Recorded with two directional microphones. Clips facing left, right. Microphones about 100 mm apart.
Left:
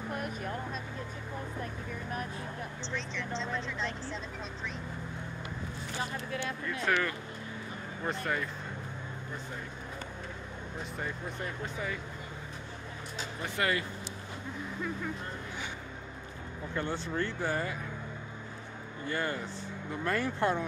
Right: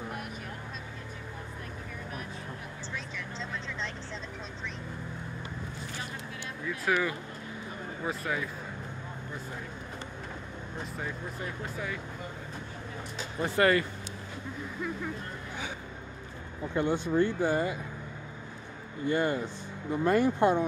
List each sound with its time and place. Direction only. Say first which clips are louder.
3.2 s vehicle: left 3 dB; centre (ahead or behind)
6.6 s speech: right 3 dB; 5° right (ahead or behind)
11.0 s speech: left 1 dB; centre (ahead or behind)
13.4 s speech: right 7 dB; 50° right (ahead or behind)
16.7 s speech: right 7 dB; 15° right (ahead or behind)
19.0 s speech: right 6 dB; 20° right (ahead or behind)